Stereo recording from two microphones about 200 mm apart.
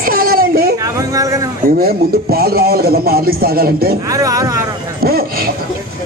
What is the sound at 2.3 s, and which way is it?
Speech, 50° right (ahead or behind).